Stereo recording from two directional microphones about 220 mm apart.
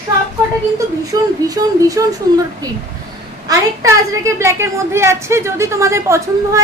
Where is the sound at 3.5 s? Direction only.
15° right (ahead or behind).